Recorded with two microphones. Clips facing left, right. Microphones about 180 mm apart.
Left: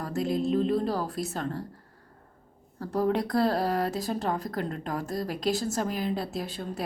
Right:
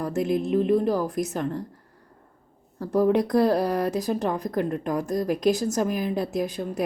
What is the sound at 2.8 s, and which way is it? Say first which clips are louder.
Speech: right 6 dB; 20° right (ahead or behind).